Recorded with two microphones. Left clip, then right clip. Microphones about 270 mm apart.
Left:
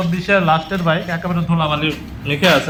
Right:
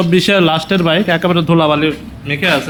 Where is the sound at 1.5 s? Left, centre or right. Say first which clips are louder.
Right 5 dB; centre.